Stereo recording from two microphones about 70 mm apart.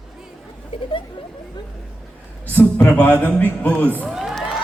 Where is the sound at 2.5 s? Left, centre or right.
Left.